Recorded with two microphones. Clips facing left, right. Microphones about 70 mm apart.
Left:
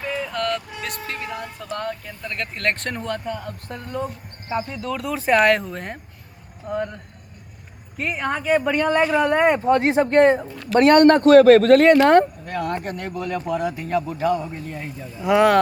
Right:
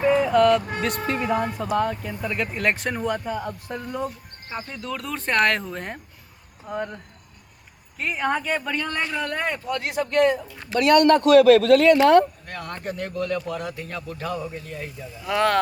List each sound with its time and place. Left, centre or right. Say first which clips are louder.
0.1 s music: right 7 dB; centre
0.9 s speech: right 7 dB; centre
9.3 s speech: left 10 dB; left
12.5 s speech: left 6 dB; centre